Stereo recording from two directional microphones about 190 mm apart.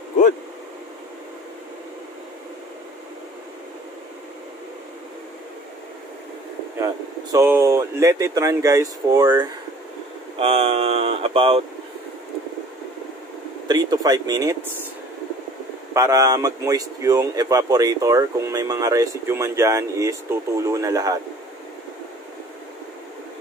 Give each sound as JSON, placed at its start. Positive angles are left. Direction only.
{"t": 7.3, "sound": "a man's voice", "side_deg": -15}
{"t": 10.4, "sound": "speech", "side_deg": -30}
{"t": 13.7, "sound": "speech", "side_deg": -20}
{"t": 15.9, "sound": "a man's voice", "side_deg": -15}